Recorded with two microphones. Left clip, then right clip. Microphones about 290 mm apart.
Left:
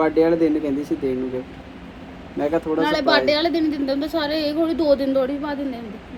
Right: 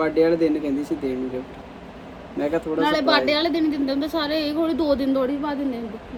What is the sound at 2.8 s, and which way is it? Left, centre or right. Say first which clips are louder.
A man's voice: even; centre.